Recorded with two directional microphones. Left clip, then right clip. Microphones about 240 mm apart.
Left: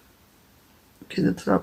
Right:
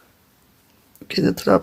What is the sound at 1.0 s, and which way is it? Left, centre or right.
Speech, right.